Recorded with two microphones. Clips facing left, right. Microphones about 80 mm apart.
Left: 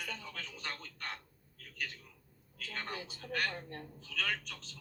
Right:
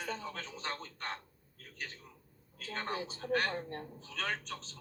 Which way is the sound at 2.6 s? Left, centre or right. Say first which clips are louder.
Right 4 dB; right.